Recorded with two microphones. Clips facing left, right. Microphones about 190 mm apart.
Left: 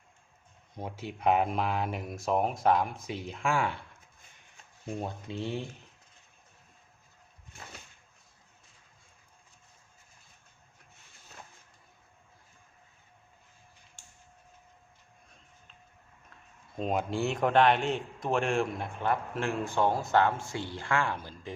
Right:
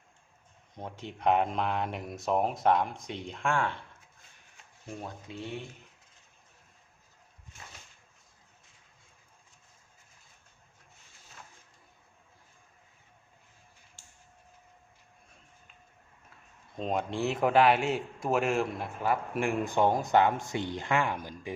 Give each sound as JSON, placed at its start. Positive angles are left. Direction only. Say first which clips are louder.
{"t": 0.8, "sound": "speech", "louder": "left 1 dB", "side_deg": 5}
{"t": 4.9, "sound": "speech", "louder": "left 4 dB", "side_deg": 25}
{"t": 16.7, "sound": "a man's voice", "louder": "left 1 dB", "side_deg": 0}